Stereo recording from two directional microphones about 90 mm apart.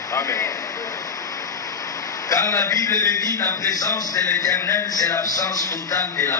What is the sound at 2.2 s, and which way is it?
A man's voice, 35° left (ahead or behind).